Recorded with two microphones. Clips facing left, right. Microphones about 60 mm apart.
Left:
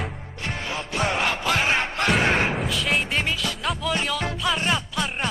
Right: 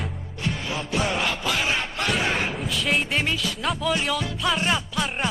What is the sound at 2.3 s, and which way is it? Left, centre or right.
Slam, left.